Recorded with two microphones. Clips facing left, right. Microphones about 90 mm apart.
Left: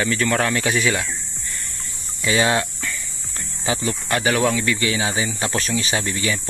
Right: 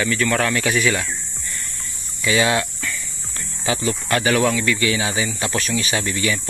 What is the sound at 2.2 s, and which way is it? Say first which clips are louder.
Speech: even; 25° left (ahead or behind).